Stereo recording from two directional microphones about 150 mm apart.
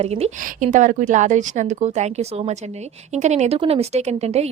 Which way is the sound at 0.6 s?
60° right (ahead or behind).